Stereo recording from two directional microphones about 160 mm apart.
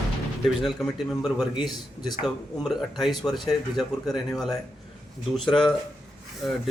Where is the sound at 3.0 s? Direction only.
Centre (ahead or behind).